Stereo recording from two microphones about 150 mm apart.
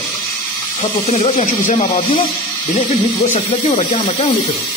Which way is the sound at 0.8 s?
45° left (ahead or behind).